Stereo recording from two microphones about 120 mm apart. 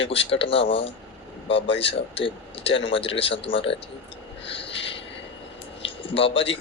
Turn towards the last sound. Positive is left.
turn(degrees=50)  # may be behind; listen again after turning